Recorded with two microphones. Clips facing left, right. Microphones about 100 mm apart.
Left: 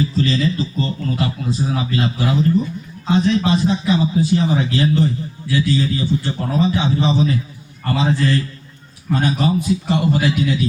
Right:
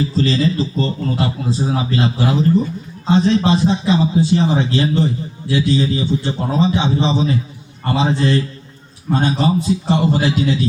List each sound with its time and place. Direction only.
0.1 s a man's voice: 35° right (ahead or behind)